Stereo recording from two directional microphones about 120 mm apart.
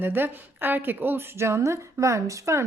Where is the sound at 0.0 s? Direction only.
15° right (ahead or behind).